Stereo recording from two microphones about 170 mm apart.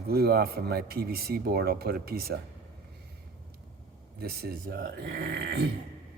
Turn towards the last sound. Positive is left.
turn(degrees=-75)  # may be behind; listen again after turning